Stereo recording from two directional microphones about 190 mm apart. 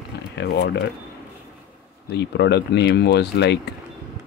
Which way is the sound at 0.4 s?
65° left (ahead or behind).